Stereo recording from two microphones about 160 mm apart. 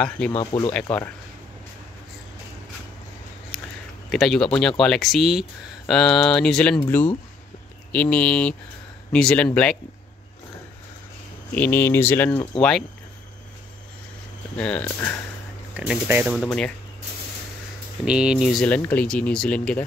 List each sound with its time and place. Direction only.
0.5 s speech: 25° left (ahead or behind)
4.1 s speech: centre (ahead or behind)
11.5 s speech: 10° left (ahead or behind)
14.6 s speech: 10° left (ahead or behind)
15.7 s speech: 10° right (ahead or behind)
16.3 s speech: 5° left (ahead or behind)
18.0 s speech: 5° right (ahead or behind)